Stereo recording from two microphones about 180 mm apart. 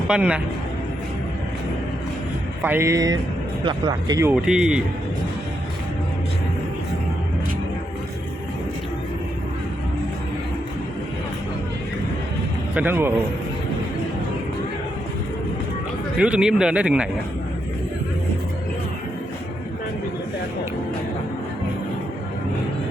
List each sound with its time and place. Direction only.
0.1 s a man's voice: 5° right (ahead or behind)
2.6 s speech: 15° right (ahead or behind)
4.2 s a man's voice: 10° right (ahead or behind)
12.7 s speech: 10° right (ahead or behind)
16.1 s a man's voice: 5° right (ahead or behind)